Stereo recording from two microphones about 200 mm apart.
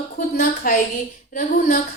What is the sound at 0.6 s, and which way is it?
Speech, 45° left (ahead or behind).